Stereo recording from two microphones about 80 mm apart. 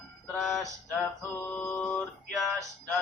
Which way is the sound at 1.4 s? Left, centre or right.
Left.